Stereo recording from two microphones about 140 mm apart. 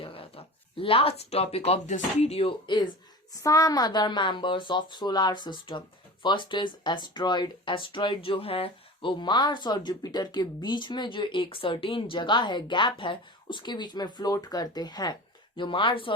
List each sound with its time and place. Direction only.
0.0 s speech: 40° left (ahead or behind)